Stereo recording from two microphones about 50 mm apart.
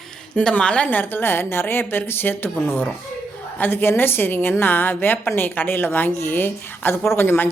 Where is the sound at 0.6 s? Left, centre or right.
Left.